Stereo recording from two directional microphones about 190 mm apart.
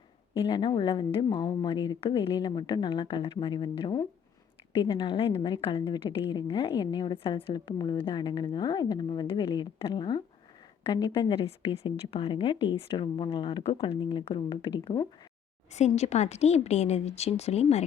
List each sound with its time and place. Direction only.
0.3 s a woman's voice: 25° left (ahead or behind)
15.7 s a woman's voice: 35° left (ahead or behind)